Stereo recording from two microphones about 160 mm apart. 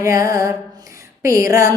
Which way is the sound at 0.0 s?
20° right (ahead or behind).